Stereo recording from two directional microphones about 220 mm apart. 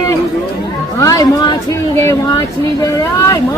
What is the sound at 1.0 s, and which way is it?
Speech, 15° left (ahead or behind).